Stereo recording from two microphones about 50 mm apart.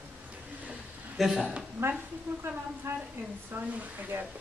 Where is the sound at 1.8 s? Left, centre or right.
Right.